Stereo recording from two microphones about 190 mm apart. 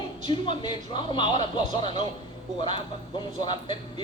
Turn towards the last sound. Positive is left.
turn(degrees=25)  # may be behind; listen again after turning